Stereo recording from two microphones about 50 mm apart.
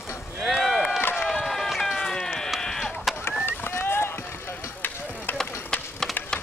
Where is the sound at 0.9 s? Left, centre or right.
Left.